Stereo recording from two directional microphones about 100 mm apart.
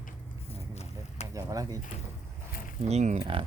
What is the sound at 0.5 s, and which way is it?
Vehicle, 90° left.